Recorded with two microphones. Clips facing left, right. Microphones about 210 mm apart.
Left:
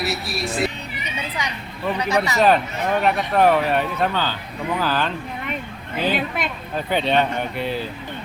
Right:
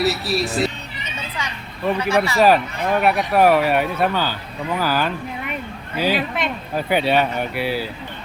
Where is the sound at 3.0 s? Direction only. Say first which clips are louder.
Right 2 dB; 10° right (ahead or behind).